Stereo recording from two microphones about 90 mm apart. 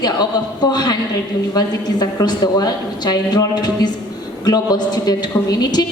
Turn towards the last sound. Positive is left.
turn(degrees=45)  # may be behind; listen again after turning